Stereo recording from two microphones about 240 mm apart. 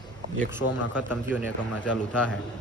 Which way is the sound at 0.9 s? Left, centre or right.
Centre.